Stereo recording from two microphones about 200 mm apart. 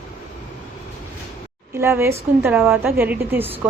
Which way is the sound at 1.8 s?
10° right (ahead or behind).